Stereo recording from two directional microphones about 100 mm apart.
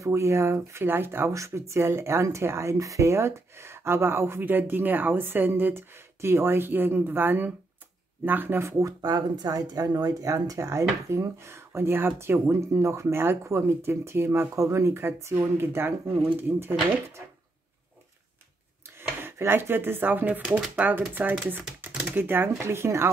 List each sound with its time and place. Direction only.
0.0 s speech: 30° right (ahead or behind)
9.0 s speech: 40° right (ahead or behind); by 16.7 s 20° right (ahead or behind)
18.9 s speech: 25° right (ahead or behind)